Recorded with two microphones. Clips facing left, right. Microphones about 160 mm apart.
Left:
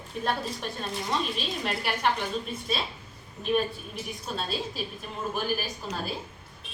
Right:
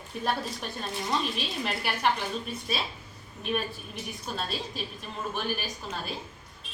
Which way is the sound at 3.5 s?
Centre (ahead or behind).